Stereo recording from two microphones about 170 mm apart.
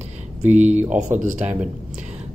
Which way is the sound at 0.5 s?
45° right (ahead or behind).